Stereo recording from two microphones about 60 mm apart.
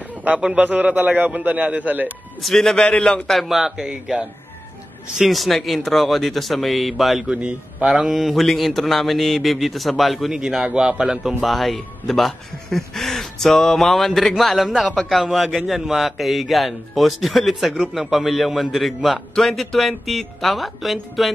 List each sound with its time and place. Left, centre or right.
0.6 s a man's voice: right
2.4 s a man's voice: centre
3.3 s speech: centre
5.2 s speech: centre
7.3 s a man's voice: right
8.0 s speech: centre
10.3 s speech: centre
11.4 s speech: centre